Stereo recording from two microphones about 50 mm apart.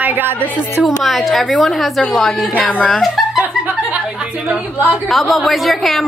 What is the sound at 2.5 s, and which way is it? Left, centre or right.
Speech, left.